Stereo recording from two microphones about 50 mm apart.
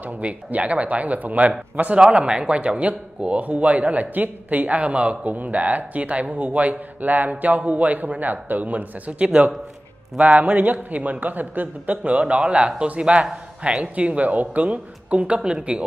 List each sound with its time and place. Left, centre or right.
0.0 s a man's voice: right